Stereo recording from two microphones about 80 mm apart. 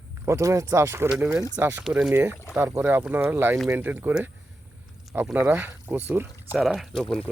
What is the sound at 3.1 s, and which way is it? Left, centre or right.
Speech, right.